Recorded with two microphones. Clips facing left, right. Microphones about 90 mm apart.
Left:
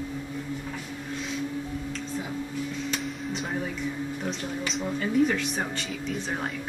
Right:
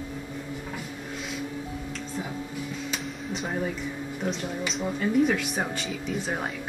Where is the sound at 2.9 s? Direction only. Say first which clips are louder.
Left 1 dB; centre (ahead or behind).